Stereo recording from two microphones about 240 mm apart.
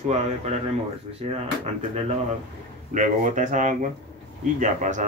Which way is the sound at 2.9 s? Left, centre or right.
Right.